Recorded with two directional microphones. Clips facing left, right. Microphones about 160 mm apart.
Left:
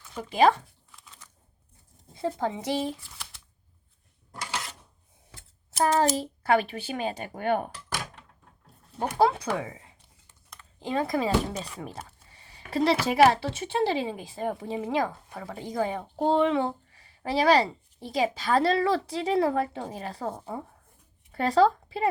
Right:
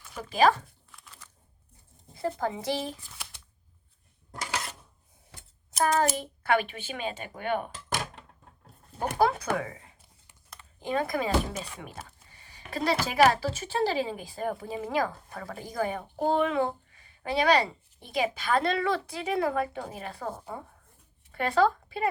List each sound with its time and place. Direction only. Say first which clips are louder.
0.2 s speech: left 2 dB; 25° left (ahead or behind)
2.1 s speech: left 1 dB; 25° left (ahead or behind)
5.8 s speech: left 2 dB; 30° left (ahead or behind)
9.0 s speech: left 2 dB; 25° left (ahead or behind)
11.8 s a sound: left 4 dB; 30° left (ahead or behind)
13.1 s speech: even; 25° left (ahead or behind)